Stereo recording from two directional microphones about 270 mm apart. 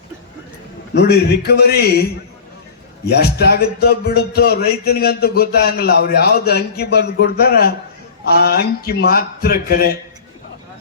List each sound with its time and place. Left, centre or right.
1.0 s speech: left
3.2 s speech: left